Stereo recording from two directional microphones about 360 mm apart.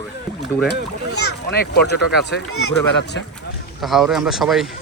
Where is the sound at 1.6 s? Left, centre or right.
Left.